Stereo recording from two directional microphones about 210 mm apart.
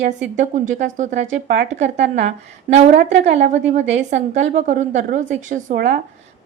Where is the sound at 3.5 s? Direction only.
35° right (ahead or behind).